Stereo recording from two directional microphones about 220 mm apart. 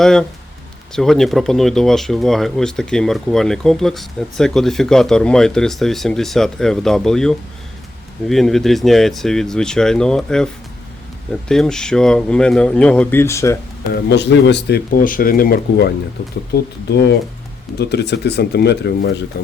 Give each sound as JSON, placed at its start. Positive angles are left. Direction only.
{"t": 0.0, "sound": "speech", "side_deg": 0}
{"t": 13.9, "sound": "speech", "side_deg": 50}